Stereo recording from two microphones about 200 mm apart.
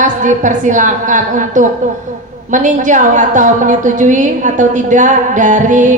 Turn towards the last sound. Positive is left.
turn(degrees=-40)  # may be behind; listen again after turning